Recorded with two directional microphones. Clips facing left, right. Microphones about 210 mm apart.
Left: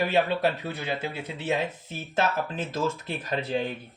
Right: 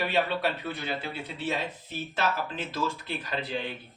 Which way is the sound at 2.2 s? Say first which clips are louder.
Left 4 dB; 45° left (ahead or behind).